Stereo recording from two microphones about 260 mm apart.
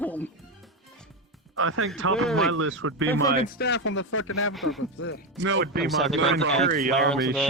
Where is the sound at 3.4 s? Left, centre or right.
Left.